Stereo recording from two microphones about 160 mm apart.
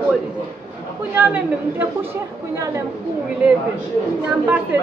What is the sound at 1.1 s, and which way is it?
Speech, 10° right (ahead or behind).